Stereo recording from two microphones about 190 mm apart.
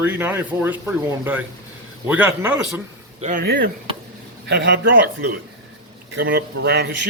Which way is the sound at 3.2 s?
40° right (ahead or behind).